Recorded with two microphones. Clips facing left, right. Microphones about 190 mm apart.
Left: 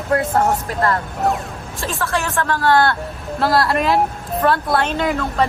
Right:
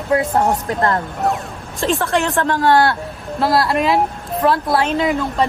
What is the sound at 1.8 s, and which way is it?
Speech, 20° right (ahead or behind).